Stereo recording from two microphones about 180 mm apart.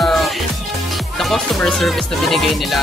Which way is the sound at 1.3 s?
Centre (ahead or behind).